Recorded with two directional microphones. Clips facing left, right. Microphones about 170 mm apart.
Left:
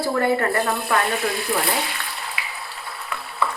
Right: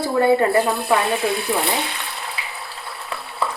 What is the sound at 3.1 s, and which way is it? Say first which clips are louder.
Frying: right 1 dB; 30° right (ahead or behind).